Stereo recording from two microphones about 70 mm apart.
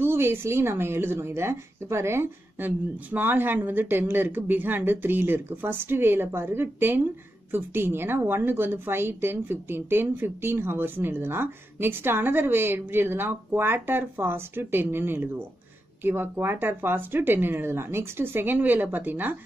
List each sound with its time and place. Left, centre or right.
0.0 s a woman's voice: right
3.1 s a woman's voice: right